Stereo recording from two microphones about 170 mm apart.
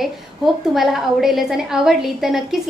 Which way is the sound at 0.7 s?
Centre (ahead or behind).